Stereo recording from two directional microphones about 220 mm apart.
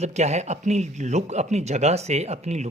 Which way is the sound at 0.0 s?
30° right (ahead or behind).